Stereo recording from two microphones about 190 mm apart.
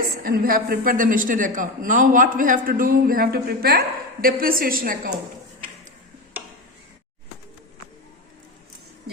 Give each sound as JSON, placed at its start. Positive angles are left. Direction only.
{"t": 0.2, "sound": "a man's voice", "side_deg": -45}